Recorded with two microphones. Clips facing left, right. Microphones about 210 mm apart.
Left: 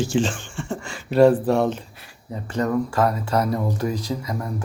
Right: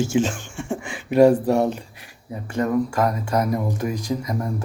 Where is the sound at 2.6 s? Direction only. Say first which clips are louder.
Even; 20° right (ahead or behind).